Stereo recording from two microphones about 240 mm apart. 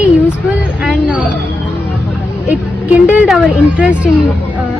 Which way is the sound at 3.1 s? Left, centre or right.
Centre.